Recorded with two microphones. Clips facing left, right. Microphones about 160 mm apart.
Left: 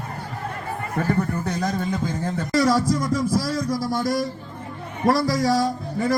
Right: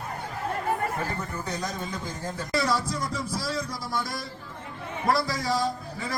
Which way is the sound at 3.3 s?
45° left (ahead or behind).